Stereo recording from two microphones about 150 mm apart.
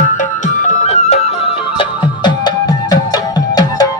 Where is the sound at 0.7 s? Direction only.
50° left (ahead or behind).